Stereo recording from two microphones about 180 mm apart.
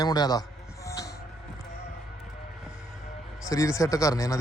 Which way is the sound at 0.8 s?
20° left (ahead or behind).